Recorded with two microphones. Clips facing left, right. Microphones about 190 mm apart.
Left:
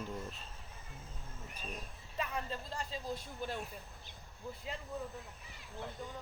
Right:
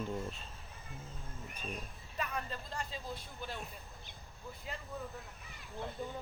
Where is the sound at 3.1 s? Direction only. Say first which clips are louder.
Left 4 dB; 45° left (ahead or behind).